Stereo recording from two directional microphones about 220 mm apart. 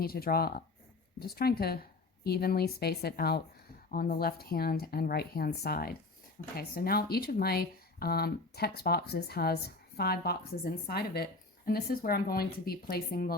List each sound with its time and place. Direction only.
0.0 s speech: 45° left (ahead or behind)